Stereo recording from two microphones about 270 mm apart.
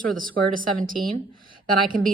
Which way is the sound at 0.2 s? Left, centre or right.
Right.